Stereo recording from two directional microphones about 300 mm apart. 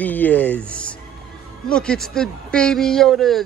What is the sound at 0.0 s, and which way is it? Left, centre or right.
Speech, centre.